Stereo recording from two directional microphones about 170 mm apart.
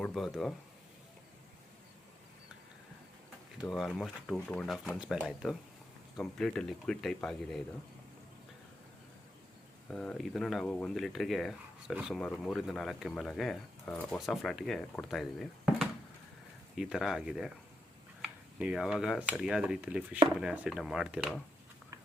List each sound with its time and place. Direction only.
0.0 s speech: centre (ahead or behind)
3.7 s speech: centre (ahead or behind)
9.9 s speech: 5° left (ahead or behind)